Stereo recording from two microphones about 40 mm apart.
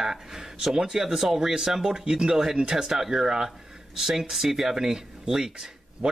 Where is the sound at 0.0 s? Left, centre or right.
Centre.